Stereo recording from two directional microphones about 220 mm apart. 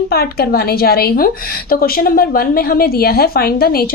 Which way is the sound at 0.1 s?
45° left (ahead or behind).